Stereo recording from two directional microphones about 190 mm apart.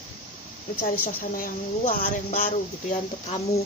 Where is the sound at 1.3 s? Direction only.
45° left (ahead or behind).